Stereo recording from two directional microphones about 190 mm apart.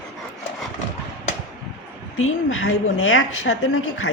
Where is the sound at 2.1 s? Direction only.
90° left.